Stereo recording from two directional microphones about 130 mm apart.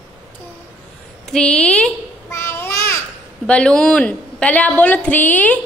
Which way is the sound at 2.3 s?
20° left (ahead or behind).